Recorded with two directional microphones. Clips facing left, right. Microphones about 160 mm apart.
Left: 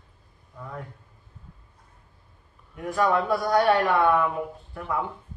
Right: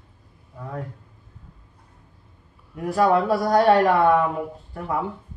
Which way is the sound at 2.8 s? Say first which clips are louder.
Right 4 dB; 35° right (ahead or behind).